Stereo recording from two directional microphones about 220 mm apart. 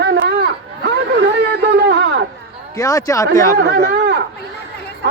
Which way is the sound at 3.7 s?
50° right (ahead or behind).